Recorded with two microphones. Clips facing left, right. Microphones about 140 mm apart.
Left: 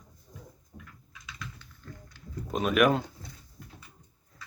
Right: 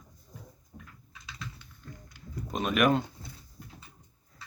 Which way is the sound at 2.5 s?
Centre (ahead or behind).